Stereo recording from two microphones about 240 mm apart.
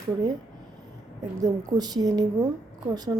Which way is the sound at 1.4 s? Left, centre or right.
Centre.